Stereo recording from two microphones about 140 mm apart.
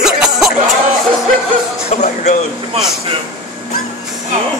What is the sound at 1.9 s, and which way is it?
Speech, 55° left (ahead or behind).